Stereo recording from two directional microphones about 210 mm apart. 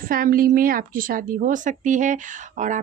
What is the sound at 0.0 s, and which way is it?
A woman's voice, 40° right (ahead or behind).